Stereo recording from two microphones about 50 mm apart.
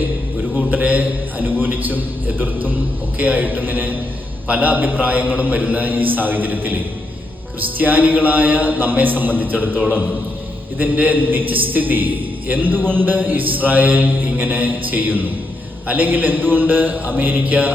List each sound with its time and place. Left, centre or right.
0.7 s a man's voice: right
10.8 s a man's voice: right
12.8 s speech: left
13.1 s a man's voice: right